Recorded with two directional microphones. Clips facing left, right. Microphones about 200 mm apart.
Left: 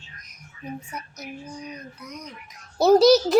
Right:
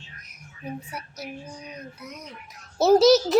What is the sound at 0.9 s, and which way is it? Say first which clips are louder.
Speech: even; 10° right (ahead or behind).